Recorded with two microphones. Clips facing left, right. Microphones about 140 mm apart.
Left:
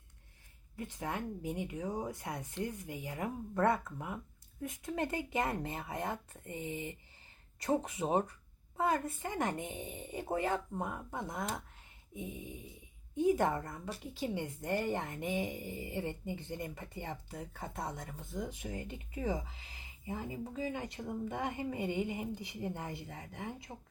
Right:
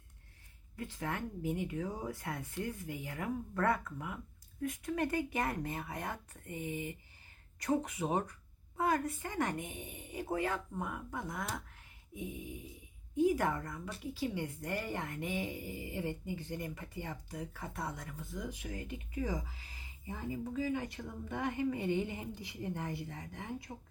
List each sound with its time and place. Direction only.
0.8 s speech: 20° left (ahead or behind)